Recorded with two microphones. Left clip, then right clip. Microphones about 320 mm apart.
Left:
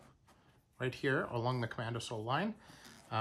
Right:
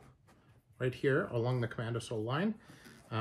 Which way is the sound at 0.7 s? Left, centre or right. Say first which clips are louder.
Right 3 dB; centre.